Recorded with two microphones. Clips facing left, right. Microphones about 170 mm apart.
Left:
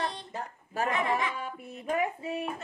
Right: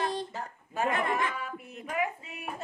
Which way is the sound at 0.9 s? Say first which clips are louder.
Left 1 dB; 50° right (ahead or behind).